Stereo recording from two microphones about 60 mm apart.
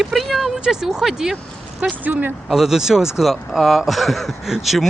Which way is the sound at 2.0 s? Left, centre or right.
Right.